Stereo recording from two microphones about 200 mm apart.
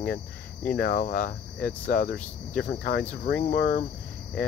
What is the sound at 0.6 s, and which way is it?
Speech, 45° left (ahead or behind).